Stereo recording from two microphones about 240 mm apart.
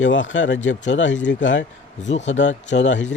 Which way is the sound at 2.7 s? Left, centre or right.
Left.